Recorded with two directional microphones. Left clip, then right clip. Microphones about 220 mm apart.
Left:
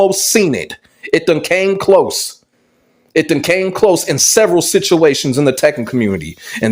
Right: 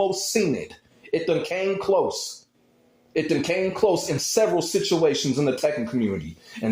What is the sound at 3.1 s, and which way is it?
A man's voice, 40° left (ahead or behind).